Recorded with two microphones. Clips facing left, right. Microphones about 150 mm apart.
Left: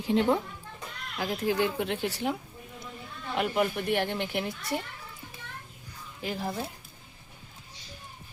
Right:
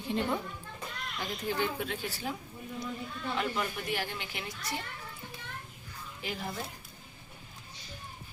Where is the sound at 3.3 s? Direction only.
55° left (ahead or behind).